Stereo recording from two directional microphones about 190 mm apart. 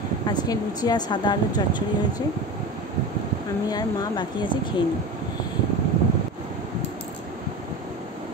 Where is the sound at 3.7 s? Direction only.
20° left (ahead or behind).